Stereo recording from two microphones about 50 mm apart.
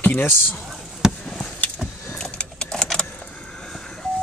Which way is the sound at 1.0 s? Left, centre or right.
Centre.